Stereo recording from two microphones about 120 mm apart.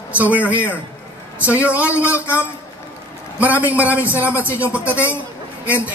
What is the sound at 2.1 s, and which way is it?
Speech, 20° left (ahead or behind).